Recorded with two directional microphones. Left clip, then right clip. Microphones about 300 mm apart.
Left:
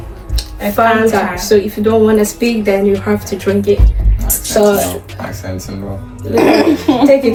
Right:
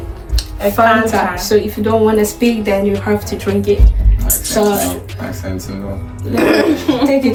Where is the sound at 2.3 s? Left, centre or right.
Centre.